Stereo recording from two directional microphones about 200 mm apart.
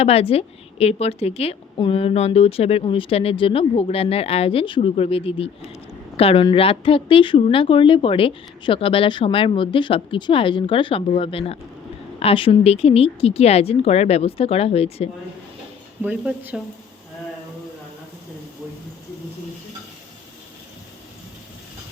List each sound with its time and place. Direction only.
0.0 s a woman's voice: 30° left (ahead or behind)
16.0 s speech: 10° right (ahead or behind)